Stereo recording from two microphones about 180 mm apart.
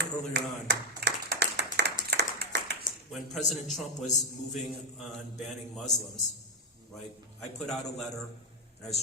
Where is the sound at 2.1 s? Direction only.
65° right (ahead or behind).